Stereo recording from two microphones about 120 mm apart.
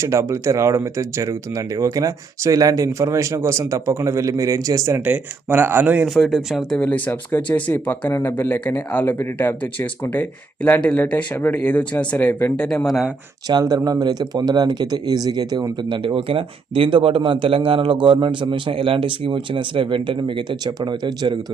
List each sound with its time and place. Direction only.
0.0 s speech: 25° right (ahead or behind)
6.1 s speech: centre (ahead or behind)
6.7 s speech: 10° left (ahead or behind)
13.5 s speech: 35° right (ahead or behind)